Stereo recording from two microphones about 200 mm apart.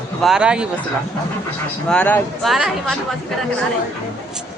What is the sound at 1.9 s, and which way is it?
A woman's voice, 5° left (ahead or behind).